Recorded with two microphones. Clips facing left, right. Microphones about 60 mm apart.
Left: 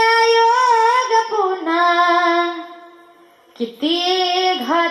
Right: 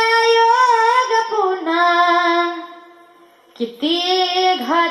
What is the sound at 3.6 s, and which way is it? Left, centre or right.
Child singing, centre.